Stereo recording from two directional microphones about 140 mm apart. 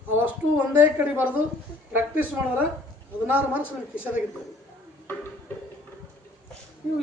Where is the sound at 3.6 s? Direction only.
15° left (ahead or behind).